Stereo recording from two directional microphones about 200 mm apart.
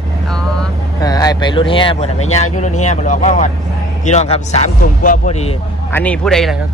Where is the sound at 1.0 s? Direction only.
20° left (ahead or behind).